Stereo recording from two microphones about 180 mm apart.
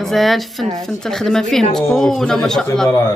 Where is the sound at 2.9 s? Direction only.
15° left (ahead or behind).